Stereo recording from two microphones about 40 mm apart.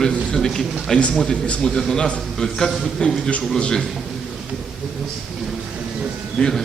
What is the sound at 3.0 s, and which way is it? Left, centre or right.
Speech, centre.